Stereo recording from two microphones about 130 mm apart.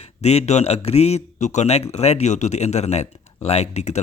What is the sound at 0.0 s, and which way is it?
Speech, 55° left (ahead or behind).